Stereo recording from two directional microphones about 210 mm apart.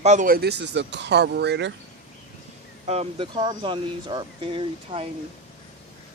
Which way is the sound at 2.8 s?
30° right (ahead or behind).